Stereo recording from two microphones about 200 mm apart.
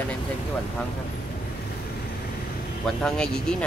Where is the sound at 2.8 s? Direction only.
5° left (ahead or behind).